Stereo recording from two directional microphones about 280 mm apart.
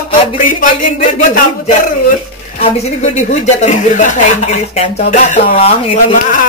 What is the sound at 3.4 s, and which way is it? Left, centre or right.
Speech, left.